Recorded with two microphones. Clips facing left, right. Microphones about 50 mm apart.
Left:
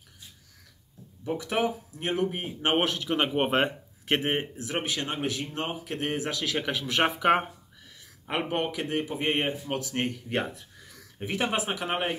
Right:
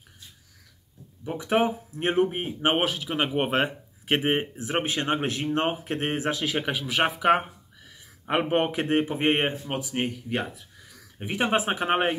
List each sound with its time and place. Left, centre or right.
1.2 s speech: centre
1.6 s speech: right; by 3.7 s centre
4.1 s speech: centre
8.3 s speech: right
9.7 s speech: centre
9.9 s speech: centre
11.2 s speech: right